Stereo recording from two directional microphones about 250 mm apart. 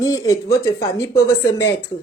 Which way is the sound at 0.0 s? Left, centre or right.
Centre.